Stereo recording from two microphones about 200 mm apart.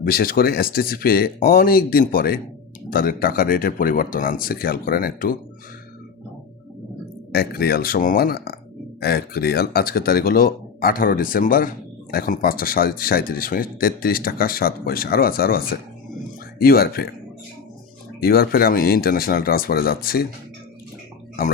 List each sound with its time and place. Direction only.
0.1 s speech: 45° left (ahead or behind)
7.3 s speech: 50° left (ahead or behind)
18.2 s speech: 50° left (ahead or behind)